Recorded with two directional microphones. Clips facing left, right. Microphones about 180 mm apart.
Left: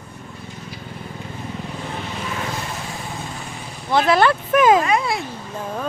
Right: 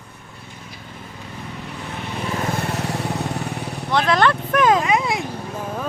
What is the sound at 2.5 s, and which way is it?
Vehicle, 65° right (ahead or behind).